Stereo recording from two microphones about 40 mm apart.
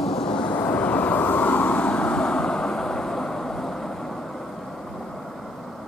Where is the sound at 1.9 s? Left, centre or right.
Left; by 4.2 s centre.